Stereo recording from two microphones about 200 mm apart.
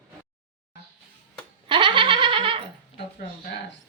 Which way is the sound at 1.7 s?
25° right (ahead or behind).